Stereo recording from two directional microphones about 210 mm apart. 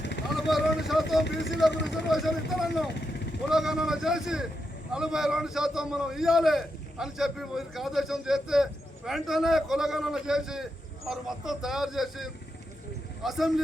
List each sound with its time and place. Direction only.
0.0 s vehicle: 55° left (ahead or behind)
0.3 s a sound: centre (ahead or behind)
1.2 s speech: 55° left (ahead or behind)
2.0 s a man's voice: centre (ahead or behind)